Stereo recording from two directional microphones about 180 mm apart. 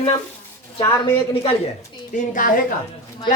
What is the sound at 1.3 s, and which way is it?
Speech, 30° left (ahead or behind).